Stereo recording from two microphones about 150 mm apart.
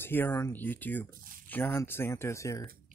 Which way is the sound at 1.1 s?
70° right (ahead or behind).